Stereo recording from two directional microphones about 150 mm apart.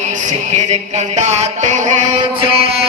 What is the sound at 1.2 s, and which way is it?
Music, 50° right (ahead or behind).